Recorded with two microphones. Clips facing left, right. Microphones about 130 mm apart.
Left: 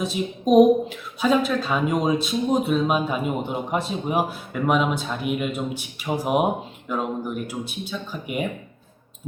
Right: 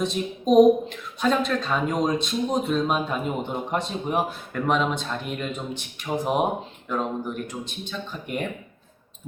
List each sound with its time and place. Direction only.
0.0 s a woman's voice: 5° left (ahead or behind)